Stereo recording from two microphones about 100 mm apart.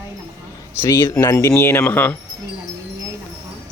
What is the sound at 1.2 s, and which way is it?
Speech, 25° left (ahead or behind).